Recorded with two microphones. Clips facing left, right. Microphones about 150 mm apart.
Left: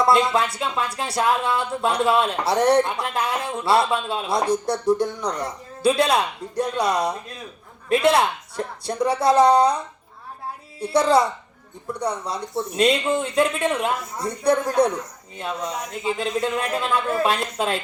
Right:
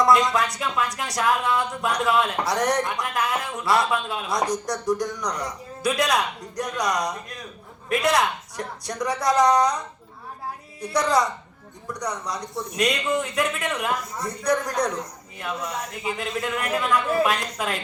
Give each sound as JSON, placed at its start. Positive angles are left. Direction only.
{"t": 0.0, "sound": "speech", "side_deg": 30}